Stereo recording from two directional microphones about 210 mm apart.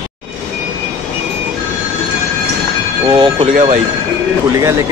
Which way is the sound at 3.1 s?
25° right (ahead or behind).